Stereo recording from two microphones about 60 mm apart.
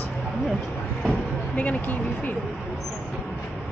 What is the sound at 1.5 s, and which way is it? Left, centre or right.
Speech, left.